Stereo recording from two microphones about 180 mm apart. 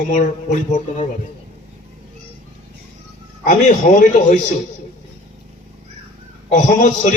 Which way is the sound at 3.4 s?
45° left (ahead or behind).